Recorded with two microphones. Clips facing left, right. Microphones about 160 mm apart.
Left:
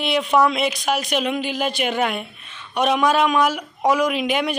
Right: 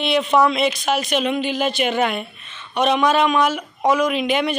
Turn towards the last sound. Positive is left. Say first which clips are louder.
# right 1 dB
turn(degrees=5)  # may be behind; listen again after turning